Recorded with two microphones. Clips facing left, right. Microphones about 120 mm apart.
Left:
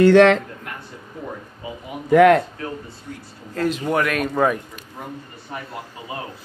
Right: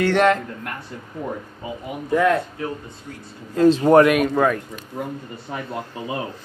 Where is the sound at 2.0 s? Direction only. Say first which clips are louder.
Left 6 dB; 75° left (ahead or behind).